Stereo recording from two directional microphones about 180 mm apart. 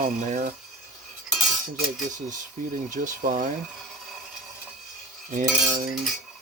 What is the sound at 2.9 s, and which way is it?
Speech, 45° right (ahead or behind).